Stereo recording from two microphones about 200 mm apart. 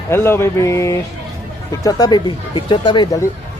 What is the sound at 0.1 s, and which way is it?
Speech, 10° left (ahead or behind).